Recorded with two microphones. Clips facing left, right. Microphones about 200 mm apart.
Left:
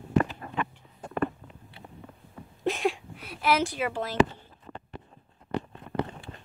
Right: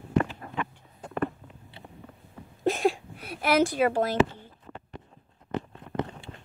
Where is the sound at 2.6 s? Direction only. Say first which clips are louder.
Right 3 dB; 40° right (ahead or behind).